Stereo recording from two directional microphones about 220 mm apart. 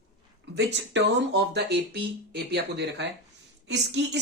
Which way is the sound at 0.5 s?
50° right (ahead or behind).